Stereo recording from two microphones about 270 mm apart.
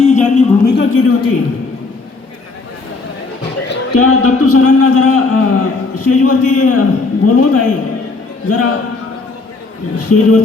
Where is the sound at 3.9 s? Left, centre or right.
Left.